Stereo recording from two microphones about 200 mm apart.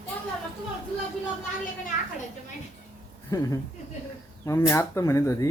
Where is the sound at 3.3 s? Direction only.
15° left (ahead or behind).